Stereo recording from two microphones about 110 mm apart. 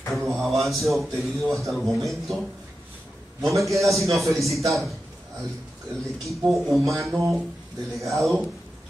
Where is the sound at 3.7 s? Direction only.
30° right (ahead or behind).